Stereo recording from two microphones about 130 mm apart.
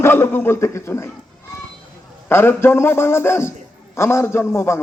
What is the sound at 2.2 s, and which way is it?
A man's voice, 20° left (ahead or behind).